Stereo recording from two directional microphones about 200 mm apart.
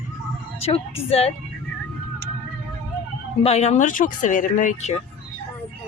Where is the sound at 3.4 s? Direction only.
30° left (ahead or behind).